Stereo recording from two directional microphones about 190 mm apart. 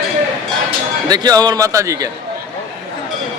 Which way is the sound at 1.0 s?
20° right (ahead or behind).